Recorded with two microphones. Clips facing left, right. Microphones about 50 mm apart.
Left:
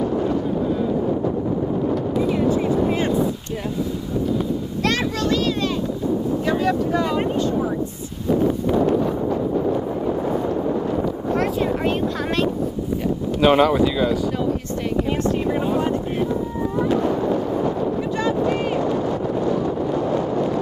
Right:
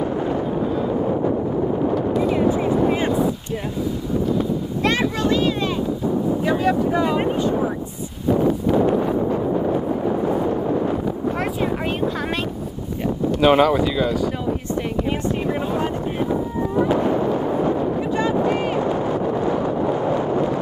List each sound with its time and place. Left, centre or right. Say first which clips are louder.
2.3 s vehicle: right 1 dB; centre
4.8 s a sound: right 2 dB; centre
6.4 s vehicle: right 2 dB; centre
13.4 s speech: even; centre
16.7 s a sound: right 2 dB; centre
18.2 s vehicle: even; centre